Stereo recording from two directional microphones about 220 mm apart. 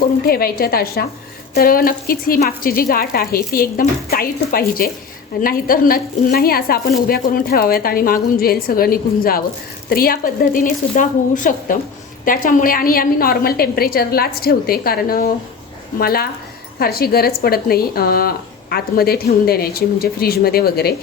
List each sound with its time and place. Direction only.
0.3 s speech: 45° left (ahead or behind)